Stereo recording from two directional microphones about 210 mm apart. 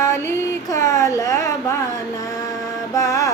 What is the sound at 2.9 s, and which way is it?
Mantra, 15° left (ahead or behind).